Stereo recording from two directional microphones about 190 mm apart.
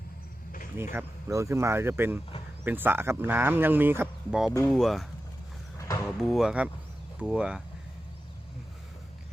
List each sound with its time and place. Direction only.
0.9 s speech: 15° right (ahead or behind); by 5.0 s centre (ahead or behind)
5.7 s a sound: 15° left (ahead or behind)
6.1 s speech: centre (ahead or behind)